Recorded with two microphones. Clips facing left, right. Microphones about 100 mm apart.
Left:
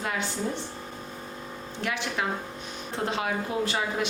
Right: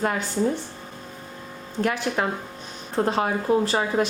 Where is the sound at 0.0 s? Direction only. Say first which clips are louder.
Right 6 dB; 45° right (ahead or behind).